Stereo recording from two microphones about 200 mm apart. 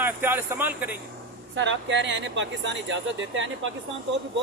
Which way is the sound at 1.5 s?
65° right (ahead or behind).